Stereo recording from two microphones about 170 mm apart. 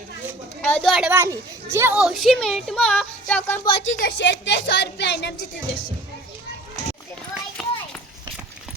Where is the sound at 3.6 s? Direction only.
30° left (ahead or behind).